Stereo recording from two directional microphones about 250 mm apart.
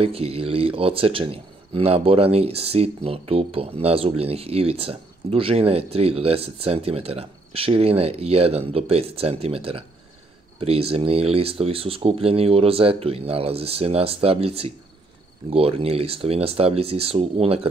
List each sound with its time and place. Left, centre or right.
0.0 s speech: right